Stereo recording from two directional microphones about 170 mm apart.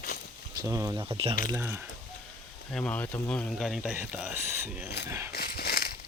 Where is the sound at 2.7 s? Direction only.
5° left (ahead or behind).